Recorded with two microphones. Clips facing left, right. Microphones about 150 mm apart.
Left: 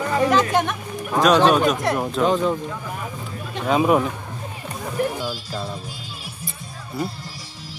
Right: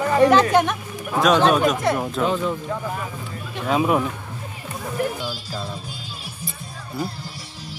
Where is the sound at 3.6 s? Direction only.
5° left (ahead or behind).